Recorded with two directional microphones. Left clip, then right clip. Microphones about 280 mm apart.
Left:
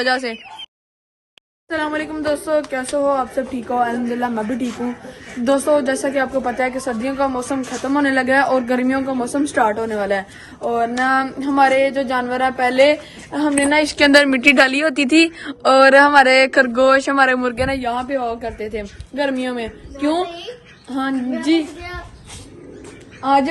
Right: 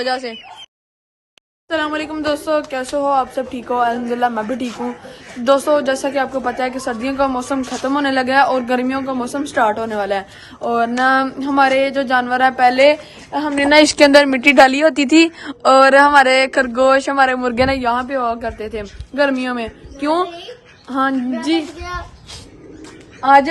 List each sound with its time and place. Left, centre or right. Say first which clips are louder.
0.0 s a woman's voice: left 2 dB; centre
1.7 s a woman's voice: right 2 dB; centre
13.6 s a woman's voice: right 6 dB; right
14.0 s a woman's voice: right 2 dB; centre
23.2 s a woman's voice: right 5 dB; right